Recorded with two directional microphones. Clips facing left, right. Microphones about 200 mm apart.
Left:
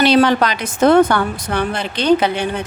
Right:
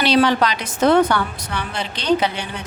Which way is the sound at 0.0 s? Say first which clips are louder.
Left 3 dB; 50° left (ahead or behind).